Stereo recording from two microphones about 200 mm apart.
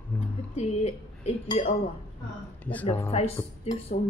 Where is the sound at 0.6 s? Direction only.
35° left (ahead or behind).